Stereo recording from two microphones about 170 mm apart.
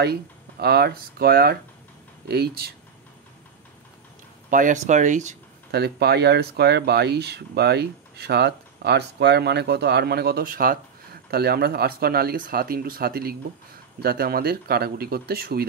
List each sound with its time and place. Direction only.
0.0 s speech: 70° right (ahead or behind)
4.5 s speech: 50° right (ahead or behind)
5.7 s speech: 70° right (ahead or behind)